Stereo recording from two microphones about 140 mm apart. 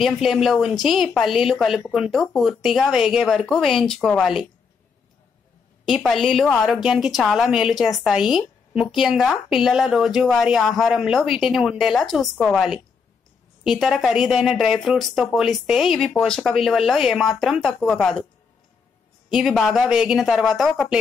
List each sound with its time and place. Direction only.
0.0 s a woman's voice: centre (ahead or behind)
5.9 s a woman's voice: centre (ahead or behind)
19.2 s a woman's voice: centre (ahead or behind)